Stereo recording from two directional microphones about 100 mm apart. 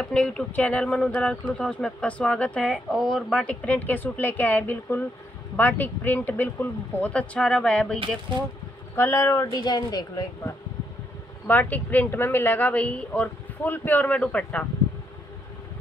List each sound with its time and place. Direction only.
0.0 s speech: 10° left (ahead or behind)
8.9 s speech: 25° left (ahead or behind)
11.4 s speech: 15° left (ahead or behind)